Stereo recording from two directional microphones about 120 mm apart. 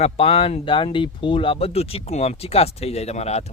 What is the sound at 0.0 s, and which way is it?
Speech, 55° left (ahead or behind).